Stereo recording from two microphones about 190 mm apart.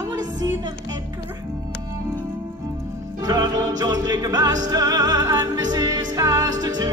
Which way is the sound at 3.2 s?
20° right (ahead or behind).